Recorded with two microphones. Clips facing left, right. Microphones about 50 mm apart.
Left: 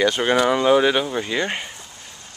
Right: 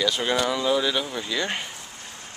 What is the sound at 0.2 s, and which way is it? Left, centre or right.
Speech, left.